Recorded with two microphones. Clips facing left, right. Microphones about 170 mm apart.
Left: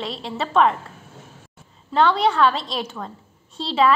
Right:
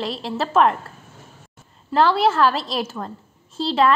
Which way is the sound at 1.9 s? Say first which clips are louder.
Right 1 dB; centre (ahead or behind).